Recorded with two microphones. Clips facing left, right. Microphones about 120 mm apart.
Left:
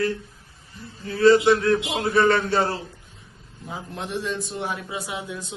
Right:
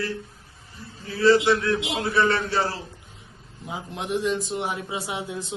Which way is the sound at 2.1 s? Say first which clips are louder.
Left 4 dB; 45° left (ahead or behind).